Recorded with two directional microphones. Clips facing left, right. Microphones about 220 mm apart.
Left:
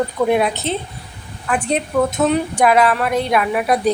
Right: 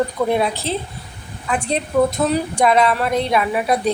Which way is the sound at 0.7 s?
35° right (ahead or behind).